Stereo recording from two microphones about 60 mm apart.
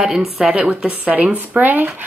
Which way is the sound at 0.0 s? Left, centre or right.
Centre.